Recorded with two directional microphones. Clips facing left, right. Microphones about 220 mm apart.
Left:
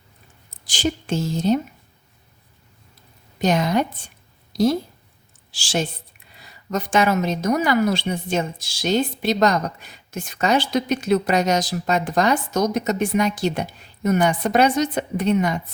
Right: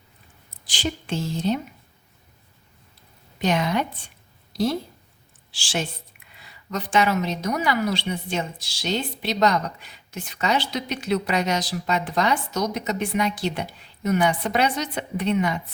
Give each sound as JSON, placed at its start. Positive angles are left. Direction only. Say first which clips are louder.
{"t": 0.6, "sound": "a woman's voice", "louder": "left 5 dB", "side_deg": 45}
{"t": 3.3, "sound": "a woman's voice", "louder": "left 3 dB", "side_deg": 40}